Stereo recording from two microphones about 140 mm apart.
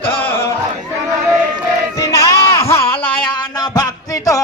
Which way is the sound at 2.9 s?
35° left (ahead or behind).